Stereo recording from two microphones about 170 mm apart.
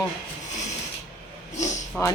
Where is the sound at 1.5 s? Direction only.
45° left (ahead or behind).